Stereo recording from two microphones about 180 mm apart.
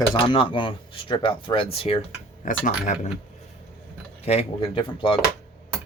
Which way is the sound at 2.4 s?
45° left (ahead or behind).